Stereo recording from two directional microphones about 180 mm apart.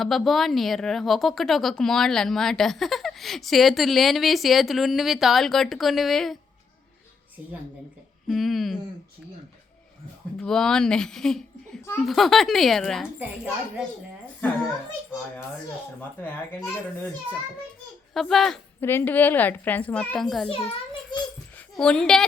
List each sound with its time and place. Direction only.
0.0 s speech: centre (ahead or behind)
8.3 s speech: centre (ahead or behind)
10.3 s a child's voice: 5° left (ahead or behind)
16.0 s a woman's voice: 10° left (ahead or behind)
18.1 s a woman's voice: centre (ahead or behind)
20.5 s a child's voice: 30° left (ahead or behind)
21.8 s speech: 5° left (ahead or behind)